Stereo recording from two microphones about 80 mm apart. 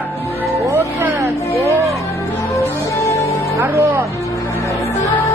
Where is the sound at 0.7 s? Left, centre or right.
Right.